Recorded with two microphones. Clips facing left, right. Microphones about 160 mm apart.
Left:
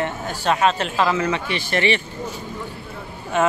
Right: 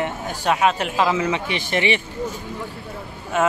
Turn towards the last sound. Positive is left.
turn(degrees=-5)  # may be behind; listen again after turning